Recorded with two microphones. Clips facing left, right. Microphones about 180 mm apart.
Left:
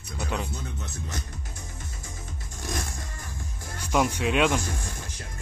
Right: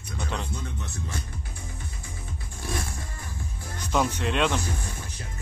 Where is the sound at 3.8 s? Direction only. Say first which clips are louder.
Left 1 dB; 10° left (ahead or behind).